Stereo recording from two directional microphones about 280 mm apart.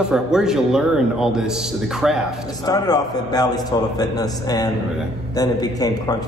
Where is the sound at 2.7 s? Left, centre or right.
Centre.